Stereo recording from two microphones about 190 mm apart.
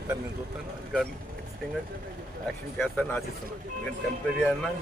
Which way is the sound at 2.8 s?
5° left (ahead or behind).